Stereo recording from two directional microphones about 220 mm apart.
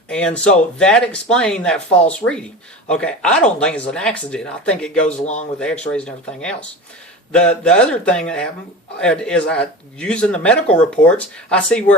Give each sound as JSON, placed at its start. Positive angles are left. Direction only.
{"t": 0.1, "sound": "a man's voice", "side_deg": 5}